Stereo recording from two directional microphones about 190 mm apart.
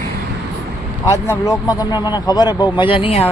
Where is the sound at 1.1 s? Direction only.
15° left (ahead or behind).